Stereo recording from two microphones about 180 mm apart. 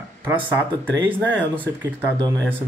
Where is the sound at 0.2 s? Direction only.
10° right (ahead or behind).